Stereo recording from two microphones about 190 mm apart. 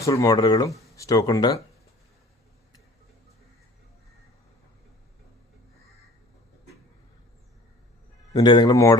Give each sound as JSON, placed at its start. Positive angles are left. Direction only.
{"t": 0.0, "sound": "speech", "side_deg": 15}
{"t": 8.3, "sound": "speech", "side_deg": 20}